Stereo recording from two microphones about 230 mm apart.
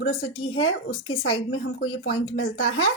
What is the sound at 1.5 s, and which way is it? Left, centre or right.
Speech, left.